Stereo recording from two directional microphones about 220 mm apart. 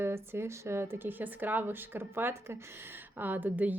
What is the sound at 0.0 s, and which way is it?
A woman's voice, 10° right (ahead or behind).